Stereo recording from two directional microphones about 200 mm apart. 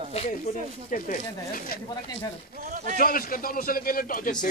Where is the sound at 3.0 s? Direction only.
45° left (ahead or behind).